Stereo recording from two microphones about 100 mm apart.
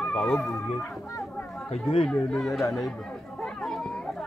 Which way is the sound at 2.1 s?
10° left (ahead or behind).